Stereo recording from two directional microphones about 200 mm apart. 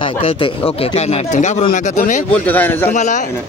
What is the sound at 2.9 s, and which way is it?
Speech, 35° left (ahead or behind).